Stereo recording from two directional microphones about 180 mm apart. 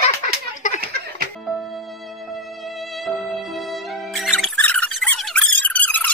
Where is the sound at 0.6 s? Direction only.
45° left (ahead or behind).